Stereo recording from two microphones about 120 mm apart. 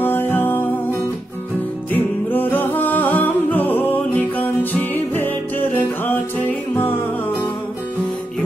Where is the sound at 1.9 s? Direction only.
15° left (ahead or behind).